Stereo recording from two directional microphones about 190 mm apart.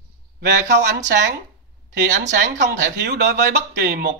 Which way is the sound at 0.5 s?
65° right (ahead or behind).